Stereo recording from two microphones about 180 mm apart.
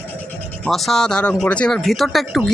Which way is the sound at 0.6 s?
Centre (ahead or behind).